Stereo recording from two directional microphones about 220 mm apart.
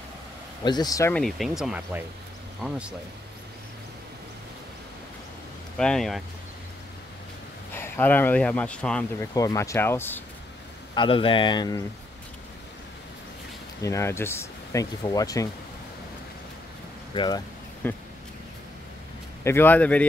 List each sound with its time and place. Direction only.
0.7 s speech: 15° left (ahead or behind)
1.1 s speech: centre (ahead or behind)
5.8 s speech: 5° left (ahead or behind)
7.7 s speech: 10° left (ahead or behind)
9.3 s speech: 15° left (ahead or behind)
11.0 s speech: 25° left (ahead or behind)
13.8 s speech: 10° left (ahead or behind)
17.1 s speech: 20° left (ahead or behind)
17.8 s speech: 10° left (ahead or behind)
19.4 s speech: 10° left (ahead or behind)